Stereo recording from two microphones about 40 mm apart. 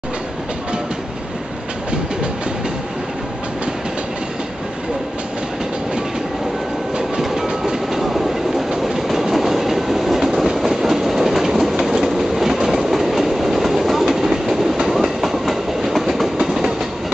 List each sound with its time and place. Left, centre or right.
7.0 s train: centre
8.0 s train: centre
16.3 s train: centre